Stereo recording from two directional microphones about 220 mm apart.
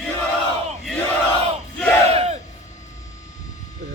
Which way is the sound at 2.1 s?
25° right (ahead or behind).